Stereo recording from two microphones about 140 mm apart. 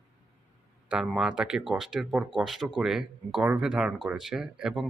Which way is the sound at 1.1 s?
5° right (ahead or behind).